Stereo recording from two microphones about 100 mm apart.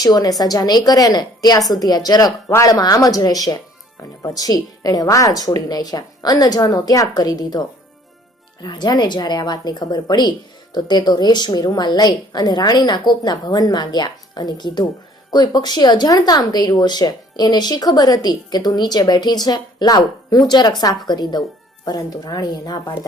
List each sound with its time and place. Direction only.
0.0 s a woman's voice: 40° left (ahead or behind)
8.6 s a woman's voice: 45° left (ahead or behind)